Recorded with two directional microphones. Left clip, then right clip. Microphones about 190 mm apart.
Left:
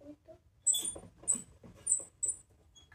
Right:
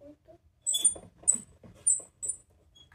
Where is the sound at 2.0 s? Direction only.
25° right (ahead or behind).